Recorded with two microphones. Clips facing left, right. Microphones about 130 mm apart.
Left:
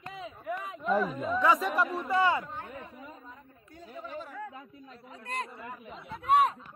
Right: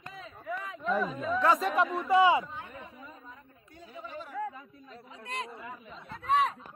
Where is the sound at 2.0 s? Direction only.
15° right (ahead or behind).